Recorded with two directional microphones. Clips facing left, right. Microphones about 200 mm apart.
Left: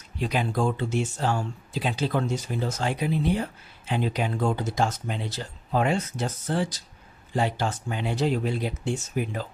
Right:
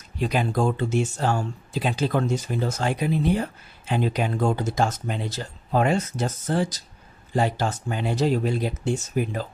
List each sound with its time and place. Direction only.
0.2 s speech: 45° right (ahead or behind)